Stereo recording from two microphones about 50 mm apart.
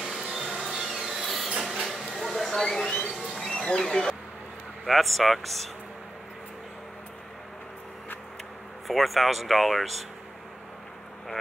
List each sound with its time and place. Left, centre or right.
0.0 s a sound: centre
3.4 s speech: centre
4.8 s speech: centre
8.8 s speech: centre